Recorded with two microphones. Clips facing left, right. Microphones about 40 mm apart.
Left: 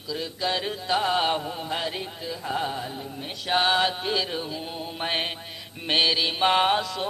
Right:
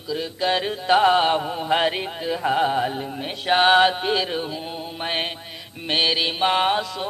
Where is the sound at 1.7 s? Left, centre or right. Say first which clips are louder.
Right 11 dB; right.